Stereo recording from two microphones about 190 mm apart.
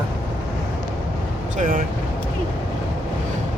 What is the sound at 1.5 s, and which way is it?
Speech, 45° right (ahead or behind).